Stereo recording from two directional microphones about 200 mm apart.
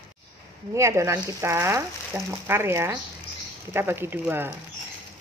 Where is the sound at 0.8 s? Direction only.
15° right (ahead or behind).